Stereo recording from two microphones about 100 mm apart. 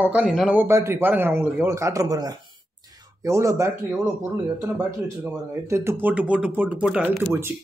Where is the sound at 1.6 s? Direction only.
30° right (ahead or behind).